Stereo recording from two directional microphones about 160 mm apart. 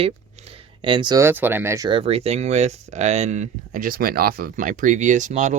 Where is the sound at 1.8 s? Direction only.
35° right (ahead or behind).